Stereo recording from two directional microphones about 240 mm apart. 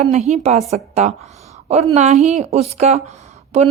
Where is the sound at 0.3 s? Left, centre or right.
Right.